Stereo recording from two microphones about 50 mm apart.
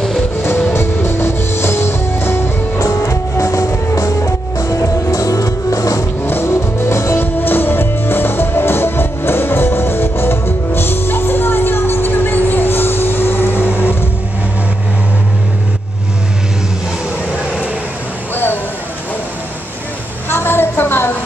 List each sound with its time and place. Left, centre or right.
0.7 s music: left
2.8 s music: left
6.4 s vehicle: left
7.2 s music: left
18.3 s a sound: left
20.2 s a sound: left